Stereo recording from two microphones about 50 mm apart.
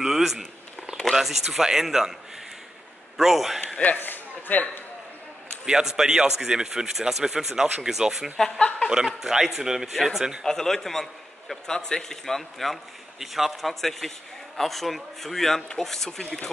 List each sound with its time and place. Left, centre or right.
0.0 s a sound: centre
1.1 s speech: centre
3.2 s speech: centre
3.6 s speech: left
4.0 s a sound: left
5.7 s speech: centre
8.5 s speech: left
8.9 s speech: centre
10.4 s a man's voice: centre